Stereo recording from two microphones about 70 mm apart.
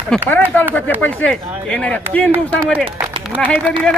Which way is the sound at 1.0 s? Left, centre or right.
Left.